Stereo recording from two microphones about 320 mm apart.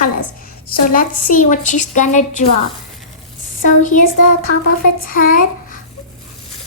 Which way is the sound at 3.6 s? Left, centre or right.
Left.